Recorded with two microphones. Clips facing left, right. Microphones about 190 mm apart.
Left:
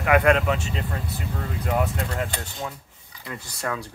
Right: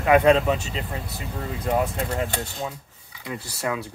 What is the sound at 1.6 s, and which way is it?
Speech, 20° right (ahead or behind).